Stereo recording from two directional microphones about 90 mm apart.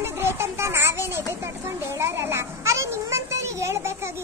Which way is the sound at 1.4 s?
30° right (ahead or behind).